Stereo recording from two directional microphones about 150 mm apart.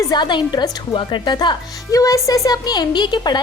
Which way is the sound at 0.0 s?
30° left (ahead or behind).